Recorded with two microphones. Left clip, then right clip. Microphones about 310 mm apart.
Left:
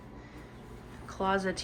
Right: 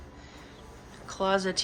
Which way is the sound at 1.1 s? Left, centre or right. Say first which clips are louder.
Right 3 dB; centre.